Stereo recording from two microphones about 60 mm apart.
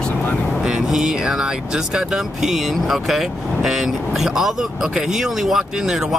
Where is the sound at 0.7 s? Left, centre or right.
Centre.